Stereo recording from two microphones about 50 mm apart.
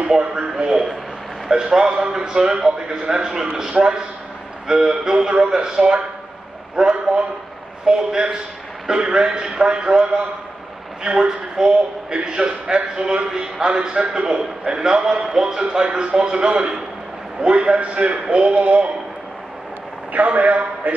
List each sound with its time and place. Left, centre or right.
0.1 s a man's voice: centre
20.1 s a man's voice: right